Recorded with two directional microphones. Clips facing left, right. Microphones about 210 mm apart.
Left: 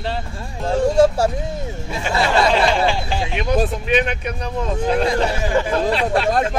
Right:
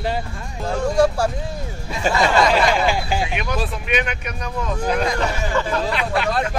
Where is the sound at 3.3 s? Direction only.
30° left (ahead or behind).